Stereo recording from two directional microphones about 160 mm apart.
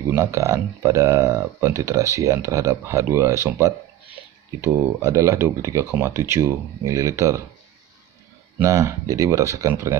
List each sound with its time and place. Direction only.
0.1 s speech: 20° right (ahead or behind)
4.7 s speech: 20° right (ahead or behind)
8.5 s speech: 20° right (ahead or behind)